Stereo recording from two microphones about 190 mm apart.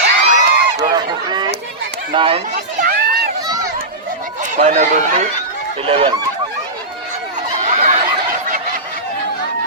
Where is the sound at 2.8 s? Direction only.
55° right (ahead or behind).